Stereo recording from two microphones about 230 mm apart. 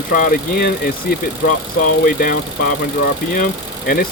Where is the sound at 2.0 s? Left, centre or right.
Left.